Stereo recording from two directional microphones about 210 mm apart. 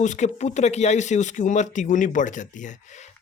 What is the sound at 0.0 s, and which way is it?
Speech, 35° left (ahead or behind).